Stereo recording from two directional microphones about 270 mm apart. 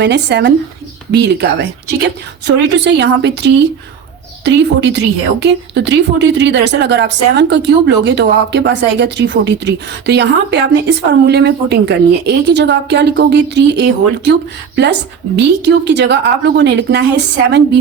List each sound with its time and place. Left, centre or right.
0.0 s speech: right
15.4 s speech: right